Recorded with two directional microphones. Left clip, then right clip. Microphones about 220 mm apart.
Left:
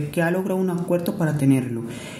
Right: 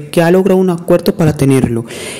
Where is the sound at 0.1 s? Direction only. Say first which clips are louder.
Right 14 dB; 45° right (ahead or behind).